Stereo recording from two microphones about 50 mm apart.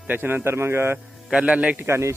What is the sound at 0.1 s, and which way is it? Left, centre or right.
Speech, right.